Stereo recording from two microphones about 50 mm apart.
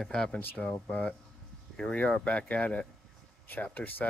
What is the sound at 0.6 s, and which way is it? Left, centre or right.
Speech, left.